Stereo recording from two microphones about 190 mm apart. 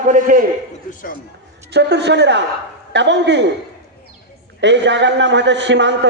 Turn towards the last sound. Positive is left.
turn(degrees=-70)  # may be behind; listen again after turning